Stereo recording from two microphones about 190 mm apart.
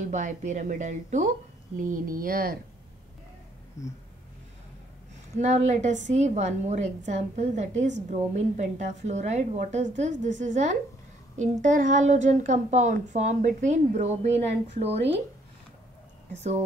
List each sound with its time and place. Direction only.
0.1 s a woman's voice: 40° right (ahead or behind)
3.8 s a sound: 15° left (ahead or behind)
5.3 s a woman's voice: 35° right (ahead or behind)
16.3 s a woman's voice: 35° right (ahead or behind)